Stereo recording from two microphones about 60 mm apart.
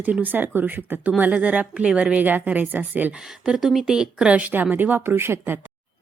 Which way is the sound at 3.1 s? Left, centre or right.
Centre.